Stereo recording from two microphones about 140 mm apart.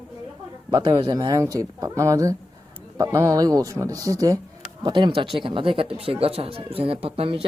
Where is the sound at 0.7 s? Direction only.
35° right (ahead or behind).